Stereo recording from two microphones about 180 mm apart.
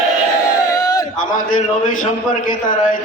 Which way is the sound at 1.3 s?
45° left (ahead or behind).